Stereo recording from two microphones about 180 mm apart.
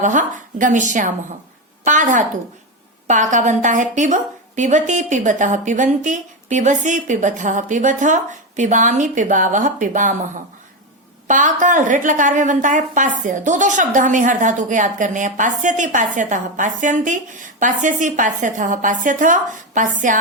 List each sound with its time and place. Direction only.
0.0 s a woman's voice: 45° right (ahead or behind)
11.3 s a woman's voice: 45° right (ahead or behind)